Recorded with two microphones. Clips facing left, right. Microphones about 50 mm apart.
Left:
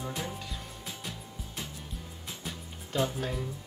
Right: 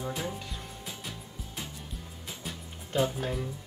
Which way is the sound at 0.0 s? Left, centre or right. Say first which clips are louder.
Right 2 dB; centre.